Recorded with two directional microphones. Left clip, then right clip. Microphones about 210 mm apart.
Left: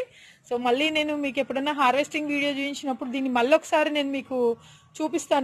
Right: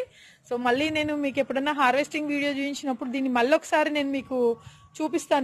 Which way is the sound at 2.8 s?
Centre (ahead or behind).